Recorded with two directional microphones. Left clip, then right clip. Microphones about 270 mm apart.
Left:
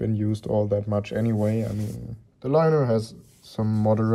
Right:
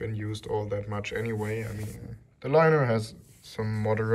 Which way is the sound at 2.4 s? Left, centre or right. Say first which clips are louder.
Left 1 dB; centre.